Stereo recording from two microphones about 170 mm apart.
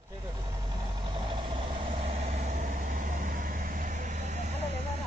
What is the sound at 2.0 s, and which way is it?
Vehicle, 50° right (ahead or behind).